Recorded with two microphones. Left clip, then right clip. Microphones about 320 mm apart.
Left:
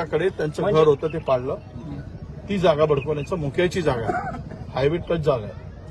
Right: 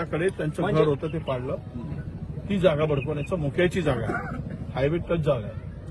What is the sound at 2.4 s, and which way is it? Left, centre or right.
Speech, centre.